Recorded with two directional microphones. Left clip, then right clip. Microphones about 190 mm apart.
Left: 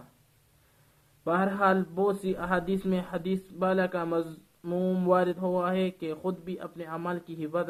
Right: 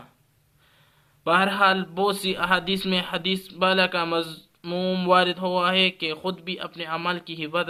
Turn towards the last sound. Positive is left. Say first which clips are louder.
# right 5 dB
turn(degrees=-20)  # may be behind; listen again after turning